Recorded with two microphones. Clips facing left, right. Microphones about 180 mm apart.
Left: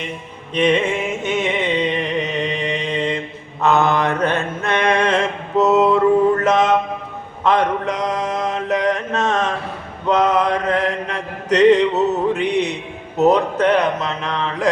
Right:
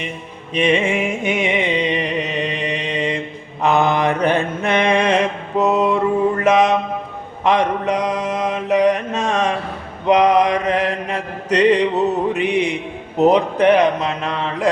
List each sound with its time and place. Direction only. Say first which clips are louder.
0.5 s music: even; 10° right (ahead or behind)
2.2 s music: left 1 dB; 65° right (ahead or behind)
2.9 s mantra: even; 10° right (ahead or behind)
7.4 s a sound: right 1 dB; 10° right (ahead or behind)
8.0 s mantra: right 1 dB; 10° right (ahead or behind)
12.3 s music: even; 10° right (ahead or behind)
13.1 s speech: right 1 dB; 15° right (ahead or behind)